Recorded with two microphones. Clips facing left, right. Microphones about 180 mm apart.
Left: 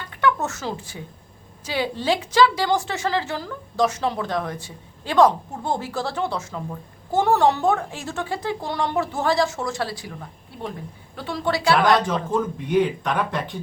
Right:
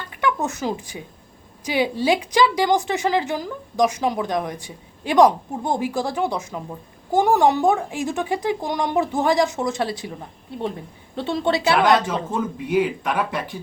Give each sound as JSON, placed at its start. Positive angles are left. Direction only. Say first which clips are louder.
{"t": 0.1, "sound": "a woman's voice", "louder": "left 1 dB", "side_deg": -15}
{"t": 12.0, "sound": "a woman's voice", "louder": "left 1 dB", "side_deg": -5}